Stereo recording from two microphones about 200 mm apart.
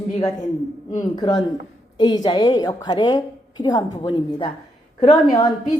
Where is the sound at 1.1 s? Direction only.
20° left (ahead or behind).